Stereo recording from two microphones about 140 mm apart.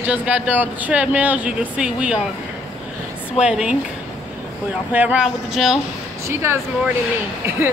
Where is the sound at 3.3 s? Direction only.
5° right (ahead or behind).